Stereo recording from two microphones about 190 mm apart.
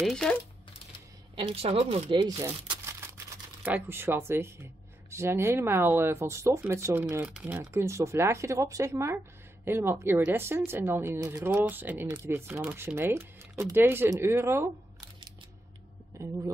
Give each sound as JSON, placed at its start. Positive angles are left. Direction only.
{"t": 0.0, "sound": "speech", "side_deg": 0}
{"t": 1.3, "sound": "speech", "side_deg": -30}
{"t": 3.6, "sound": "speech", "side_deg": -10}
{"t": 16.1, "sound": "a sound", "side_deg": -15}